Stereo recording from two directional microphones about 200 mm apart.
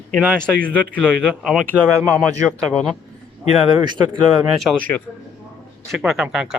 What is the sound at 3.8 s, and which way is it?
Speech, 25° right (ahead or behind).